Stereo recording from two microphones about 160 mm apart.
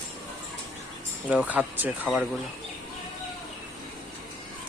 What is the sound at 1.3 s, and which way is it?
Speech, 10° right (ahead or behind).